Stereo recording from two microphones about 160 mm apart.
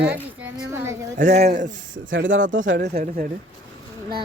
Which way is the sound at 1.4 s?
50° right (ahead or behind).